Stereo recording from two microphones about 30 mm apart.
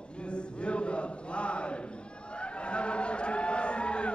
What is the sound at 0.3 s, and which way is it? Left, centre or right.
Chant, left.